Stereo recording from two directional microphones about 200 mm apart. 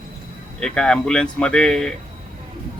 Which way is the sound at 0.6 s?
5° left (ahead or behind).